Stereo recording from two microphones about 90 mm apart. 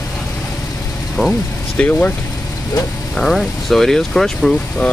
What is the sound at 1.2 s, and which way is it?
Speech, centre (ahead or behind).